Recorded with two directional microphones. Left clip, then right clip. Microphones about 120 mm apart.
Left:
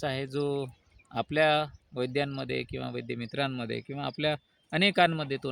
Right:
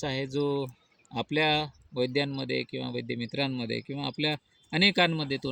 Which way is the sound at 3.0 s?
70° left (ahead or behind).